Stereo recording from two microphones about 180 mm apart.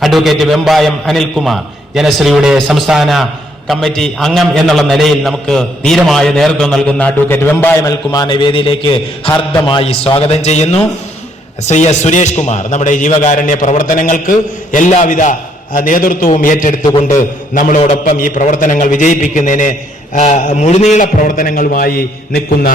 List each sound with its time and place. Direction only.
0.0 s a man's voice: centre (ahead or behind); by 22.7 s 55° left (ahead or behind)